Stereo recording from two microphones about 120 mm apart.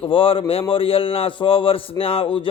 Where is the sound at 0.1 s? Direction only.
45° left (ahead or behind).